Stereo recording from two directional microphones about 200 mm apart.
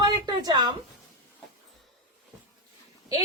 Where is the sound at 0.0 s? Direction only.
20° right (ahead or behind).